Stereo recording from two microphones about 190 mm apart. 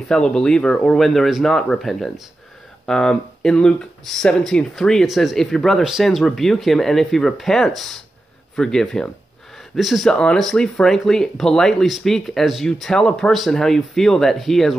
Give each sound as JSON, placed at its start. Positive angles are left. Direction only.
{"t": 0.1, "sound": "speech", "side_deg": 5}